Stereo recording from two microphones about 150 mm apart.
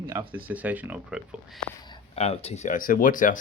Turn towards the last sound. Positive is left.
turn(degrees=60)  # may be behind; listen again after turning